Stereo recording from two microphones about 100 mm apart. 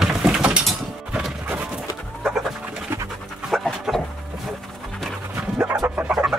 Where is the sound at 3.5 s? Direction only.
Centre (ahead or behind).